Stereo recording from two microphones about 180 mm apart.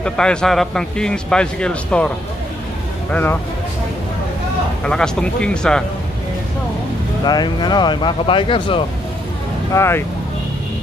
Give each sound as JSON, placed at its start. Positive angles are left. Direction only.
{"t": 0.0, "sound": "a man's voice", "side_deg": 5}
{"t": 4.8, "sound": "a man's voice", "side_deg": 5}
{"t": 7.2, "sound": "speech", "side_deg": 25}
{"t": 9.8, "sound": "speech", "side_deg": 15}